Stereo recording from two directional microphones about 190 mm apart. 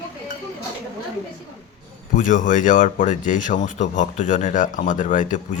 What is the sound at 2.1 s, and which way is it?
Speech, 45° left (ahead or behind).